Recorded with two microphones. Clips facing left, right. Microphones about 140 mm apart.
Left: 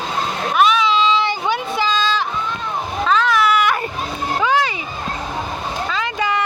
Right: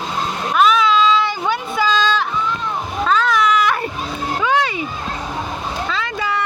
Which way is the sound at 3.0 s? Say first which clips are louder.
Even; centre (ahead or behind).